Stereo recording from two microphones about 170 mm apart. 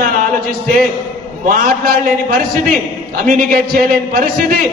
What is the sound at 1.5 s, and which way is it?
A man's voice, 60° right (ahead or behind).